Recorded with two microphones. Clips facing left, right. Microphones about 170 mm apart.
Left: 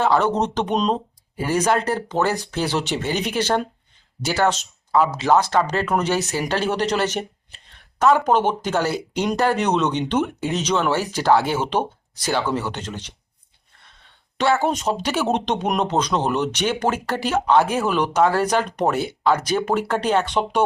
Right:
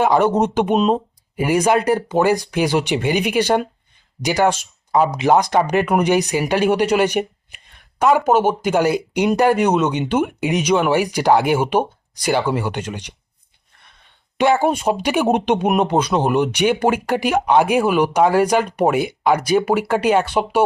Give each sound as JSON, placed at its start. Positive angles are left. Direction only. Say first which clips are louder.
{"t": 0.0, "sound": "speech", "louder": "right 4 dB", "side_deg": -10}
{"t": 14.3, "sound": "speech", "louder": "right 4 dB", "side_deg": -15}